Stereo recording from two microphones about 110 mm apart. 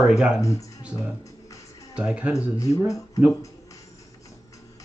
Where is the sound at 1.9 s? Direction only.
10° right (ahead or behind).